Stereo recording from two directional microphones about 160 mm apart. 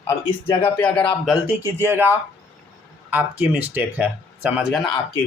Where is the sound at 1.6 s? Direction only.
15° right (ahead or behind).